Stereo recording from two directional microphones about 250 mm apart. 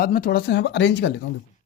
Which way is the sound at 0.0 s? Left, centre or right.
Left.